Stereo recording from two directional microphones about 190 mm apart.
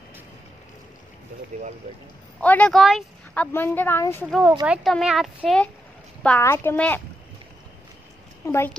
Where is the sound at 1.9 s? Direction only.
35° right (ahead or behind).